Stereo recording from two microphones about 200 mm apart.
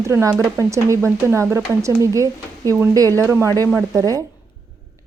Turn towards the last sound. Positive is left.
turn(degrees=-15)  # may be behind; listen again after turning